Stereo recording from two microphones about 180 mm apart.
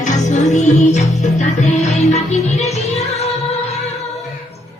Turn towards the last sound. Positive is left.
turn(degrees=35)  # may be behind; listen again after turning